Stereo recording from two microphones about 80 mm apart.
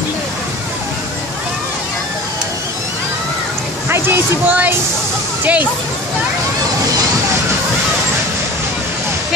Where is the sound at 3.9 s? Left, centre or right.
Right.